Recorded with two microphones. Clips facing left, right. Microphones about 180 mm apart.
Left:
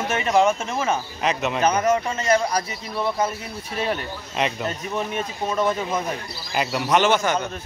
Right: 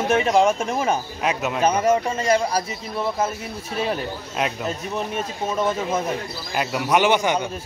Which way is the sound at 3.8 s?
Centre (ahead or behind).